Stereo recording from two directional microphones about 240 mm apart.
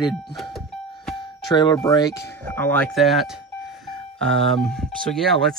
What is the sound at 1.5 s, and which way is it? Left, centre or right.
Speech, centre.